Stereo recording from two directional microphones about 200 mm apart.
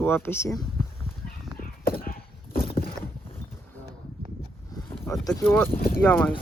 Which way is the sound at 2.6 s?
50° left (ahead or behind).